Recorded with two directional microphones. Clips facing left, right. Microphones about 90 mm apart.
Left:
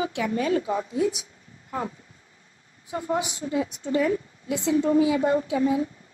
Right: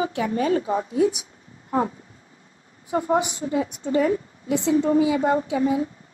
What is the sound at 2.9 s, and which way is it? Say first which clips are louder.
A woman's voice: right 5 dB; 40° right (ahead or behind).